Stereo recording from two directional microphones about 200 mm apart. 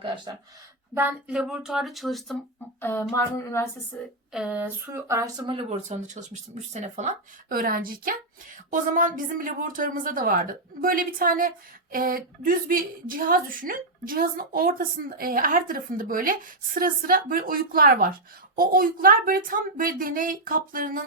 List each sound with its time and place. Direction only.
0.9 s speech: 5° right (ahead or behind)
2.8 s speech: 10° left (ahead or behind)
4.3 s a sound: 5° right (ahead or behind)
5.5 s speech: 30° right (ahead or behind)